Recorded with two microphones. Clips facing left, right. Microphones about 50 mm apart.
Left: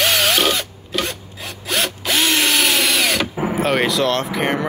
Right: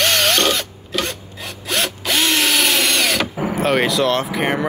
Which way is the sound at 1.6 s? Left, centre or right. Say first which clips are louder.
Even; centre.